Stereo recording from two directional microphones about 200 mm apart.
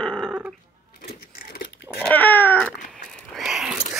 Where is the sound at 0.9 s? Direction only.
50° left (ahead or behind).